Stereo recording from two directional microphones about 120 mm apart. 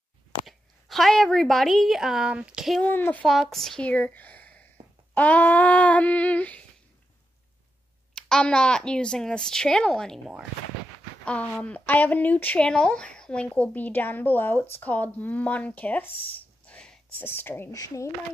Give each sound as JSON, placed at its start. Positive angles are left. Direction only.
{"t": 0.5, "sound": "a woman's voice", "side_deg": 0}
{"t": 2.8, "sound": "speech", "side_deg": 15}
{"t": 3.3, "sound": "a woman's voice", "side_deg": 0}
{"t": 8.1, "sound": "speech", "side_deg": 5}
{"t": 16.6, "sound": "a sound", "side_deg": 10}
{"t": 17.2, "sound": "speech", "side_deg": 15}
{"t": 17.7, "sound": "speech", "side_deg": 30}